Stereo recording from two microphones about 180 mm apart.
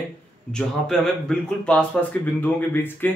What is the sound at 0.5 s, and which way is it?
Speech, 5° left (ahead or behind).